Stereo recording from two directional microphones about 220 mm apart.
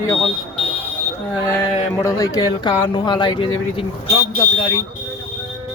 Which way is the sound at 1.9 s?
15° left (ahead or behind).